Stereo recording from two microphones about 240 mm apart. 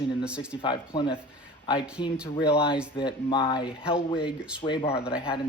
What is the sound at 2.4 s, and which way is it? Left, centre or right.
Speech, left.